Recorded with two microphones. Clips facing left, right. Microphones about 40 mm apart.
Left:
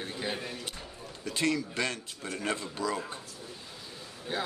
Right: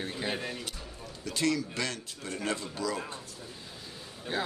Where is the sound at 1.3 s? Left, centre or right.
Left.